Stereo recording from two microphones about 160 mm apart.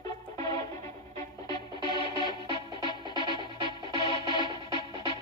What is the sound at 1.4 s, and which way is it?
Music, 25° left (ahead or behind).